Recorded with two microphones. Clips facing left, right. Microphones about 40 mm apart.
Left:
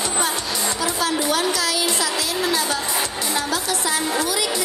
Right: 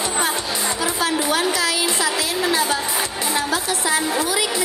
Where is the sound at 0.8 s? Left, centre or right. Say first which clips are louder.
Right 1 dB; right.